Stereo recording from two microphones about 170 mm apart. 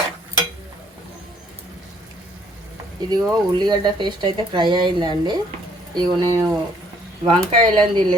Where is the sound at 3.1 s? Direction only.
25° right (ahead or behind).